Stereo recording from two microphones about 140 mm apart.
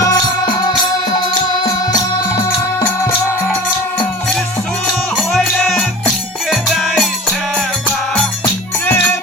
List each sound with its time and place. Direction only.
0.0 s music: 30° left (ahead or behind)
5.3 s music: centre (ahead or behind)